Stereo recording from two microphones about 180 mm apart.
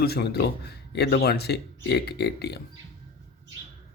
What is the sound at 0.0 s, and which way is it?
Speech, 65° left (ahead or behind).